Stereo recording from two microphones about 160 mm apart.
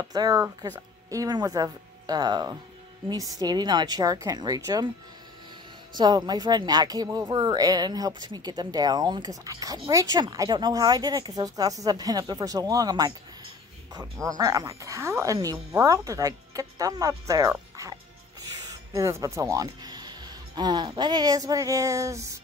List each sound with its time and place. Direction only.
0.0 s a woman's voice: 25° right (ahead or behind)
5.9 s a woman's voice: 25° right (ahead or behind)
14.3 s a woman's voice: 20° right (ahead or behind)